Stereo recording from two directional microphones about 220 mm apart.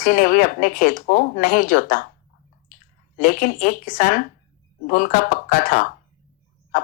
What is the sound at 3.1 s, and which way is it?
A woman's voice, 40° left (ahead or behind).